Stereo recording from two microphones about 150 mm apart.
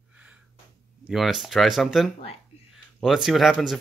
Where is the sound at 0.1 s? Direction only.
10° right (ahead or behind).